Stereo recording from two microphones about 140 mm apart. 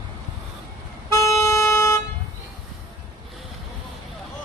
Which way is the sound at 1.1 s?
20° left (ahead or behind).